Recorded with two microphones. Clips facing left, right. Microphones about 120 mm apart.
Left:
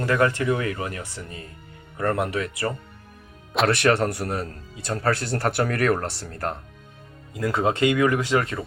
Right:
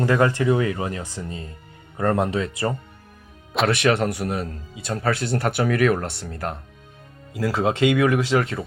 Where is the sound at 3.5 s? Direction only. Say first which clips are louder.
Even; centre (ahead or behind).